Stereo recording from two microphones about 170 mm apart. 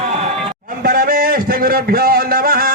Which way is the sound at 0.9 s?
60° right (ahead or behind).